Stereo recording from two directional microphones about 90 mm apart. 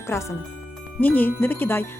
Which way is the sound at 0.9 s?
20° left (ahead or behind).